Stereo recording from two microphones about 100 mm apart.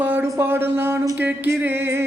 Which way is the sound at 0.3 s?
25° right (ahead or behind).